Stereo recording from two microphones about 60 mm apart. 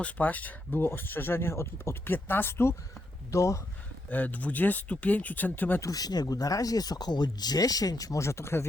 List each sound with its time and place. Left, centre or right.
0.0 s speech: left
2.1 s speech: left
3.3 s speech: left
4.1 s speech: left
5.8 s speech: left
8.2 s speech: left